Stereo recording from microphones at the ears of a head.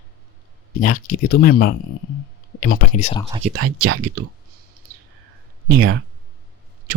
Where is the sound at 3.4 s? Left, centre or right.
Right.